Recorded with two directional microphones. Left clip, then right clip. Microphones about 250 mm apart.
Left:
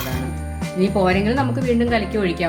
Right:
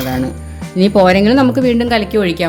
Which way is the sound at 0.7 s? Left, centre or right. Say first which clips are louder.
Right 9 dB; right.